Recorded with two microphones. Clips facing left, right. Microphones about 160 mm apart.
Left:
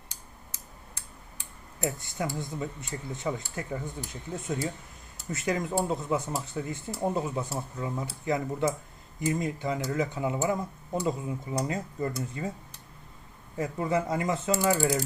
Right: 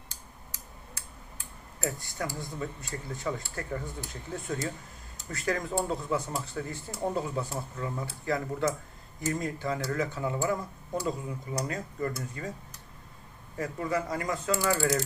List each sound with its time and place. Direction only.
1.8 s speech: 20° left (ahead or behind)
13.6 s speech: 25° left (ahead or behind)